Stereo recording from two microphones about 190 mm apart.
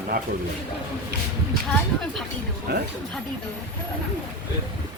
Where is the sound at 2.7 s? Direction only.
55° right (ahead or behind).